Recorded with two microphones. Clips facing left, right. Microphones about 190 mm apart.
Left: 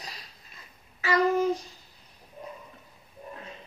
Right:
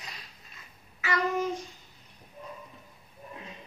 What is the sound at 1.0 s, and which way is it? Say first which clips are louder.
Child singing: left 5 dB; 35° left (ahead or behind).